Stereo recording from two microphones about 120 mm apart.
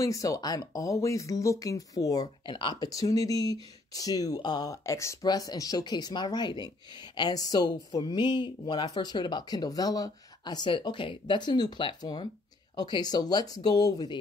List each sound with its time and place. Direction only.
0.0 s speech: 25° left (ahead or behind)
2.4 s speech: 40° left (ahead or behind)